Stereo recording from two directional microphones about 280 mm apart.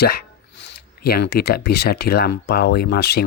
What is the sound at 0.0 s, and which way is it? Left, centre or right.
Speech, left.